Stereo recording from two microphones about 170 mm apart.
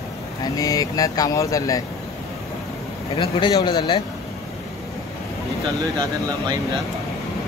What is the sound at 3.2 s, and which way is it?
Speech, 25° left (ahead or behind).